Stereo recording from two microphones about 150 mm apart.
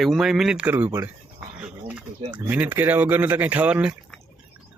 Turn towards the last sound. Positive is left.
turn(degrees=-5)  # may be behind; listen again after turning